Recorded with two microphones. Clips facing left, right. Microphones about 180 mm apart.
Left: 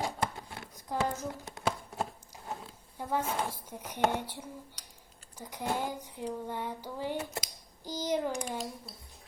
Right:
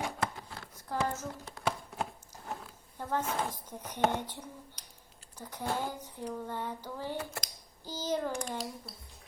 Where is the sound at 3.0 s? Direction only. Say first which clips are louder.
Left 1 dB; 10° left (ahead or behind).